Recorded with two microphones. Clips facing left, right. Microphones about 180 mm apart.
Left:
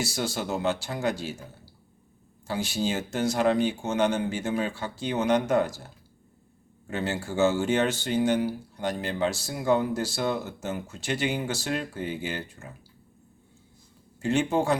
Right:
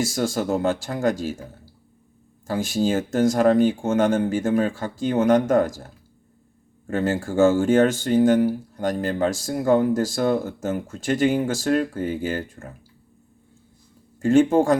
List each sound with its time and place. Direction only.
0.0 s speech: 45° right (ahead or behind)
2.5 s speech: 45° right (ahead or behind)
14.2 s speech: 45° right (ahead or behind)